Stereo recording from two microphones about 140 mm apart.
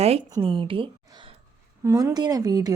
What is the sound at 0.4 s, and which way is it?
Speech, 40° right (ahead or behind).